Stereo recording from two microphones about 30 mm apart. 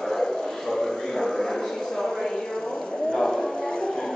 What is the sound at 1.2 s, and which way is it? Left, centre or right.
Dog, left.